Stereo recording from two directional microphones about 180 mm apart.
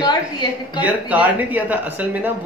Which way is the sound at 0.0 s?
25° left (ahead or behind).